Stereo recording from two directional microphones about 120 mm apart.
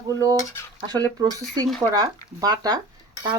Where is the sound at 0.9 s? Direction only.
35° right (ahead or behind).